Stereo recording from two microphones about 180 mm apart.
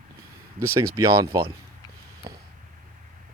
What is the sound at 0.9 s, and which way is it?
Speech, 20° right (ahead or behind).